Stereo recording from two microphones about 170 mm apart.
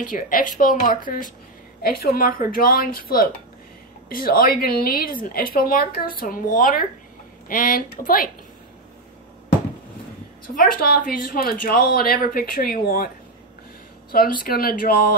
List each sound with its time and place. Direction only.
0.1 s a woman's voice: 50° left (ahead or behind)
10.7 s a woman's voice: 60° left (ahead or behind)
14.4 s a woman's voice: 60° left (ahead or behind)